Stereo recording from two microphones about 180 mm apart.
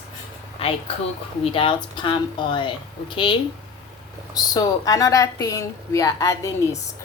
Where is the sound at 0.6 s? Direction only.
30° left (ahead or behind).